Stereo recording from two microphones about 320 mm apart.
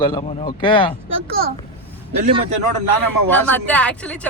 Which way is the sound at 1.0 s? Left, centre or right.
Right.